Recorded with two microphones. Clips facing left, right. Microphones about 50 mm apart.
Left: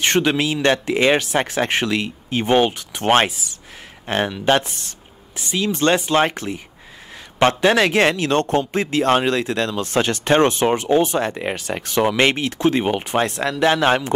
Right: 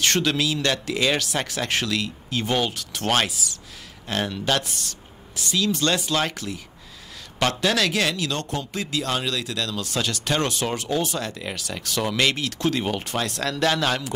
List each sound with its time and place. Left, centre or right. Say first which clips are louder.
0.0 s a man's voice: left 4 dB; left